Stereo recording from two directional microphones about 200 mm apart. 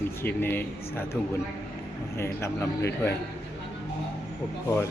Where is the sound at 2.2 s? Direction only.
15° left (ahead or behind).